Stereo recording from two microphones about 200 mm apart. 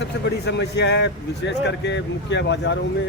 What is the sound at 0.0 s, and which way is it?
A man's voice, 60° left (ahead or behind).